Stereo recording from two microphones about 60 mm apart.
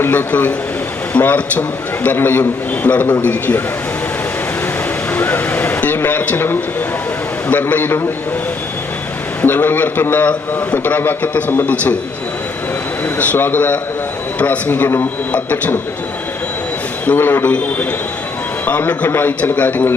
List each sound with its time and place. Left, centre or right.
0.0 s a man's voice: left
5.1 s vehicle: left
6.0 s a sound: left
7.4 s a man's voice: left
9.4 s a man's voice: left
13.1 s a man's voice: left
17.2 s a man's voice: left
17.4 s a man's voice: left